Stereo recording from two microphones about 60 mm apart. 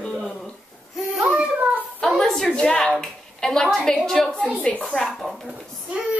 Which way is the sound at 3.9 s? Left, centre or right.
Centre.